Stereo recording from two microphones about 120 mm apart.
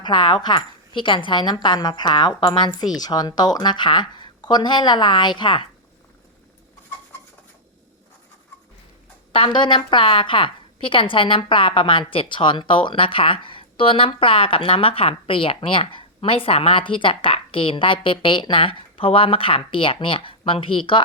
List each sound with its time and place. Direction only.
0.0 s a woman's voice: 40° left (ahead or behind)
9.3 s a woman's voice: 45° left (ahead or behind)